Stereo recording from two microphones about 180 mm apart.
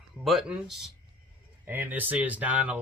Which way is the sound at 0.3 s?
Centre (ahead or behind).